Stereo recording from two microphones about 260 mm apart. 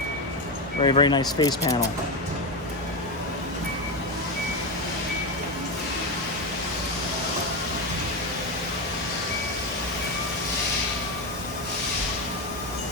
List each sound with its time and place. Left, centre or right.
0.8 s speech: centre